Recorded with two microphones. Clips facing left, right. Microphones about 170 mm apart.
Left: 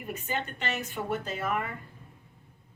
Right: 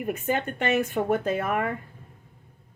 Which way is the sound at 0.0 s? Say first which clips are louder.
Right 7 dB; 55° right (ahead or behind).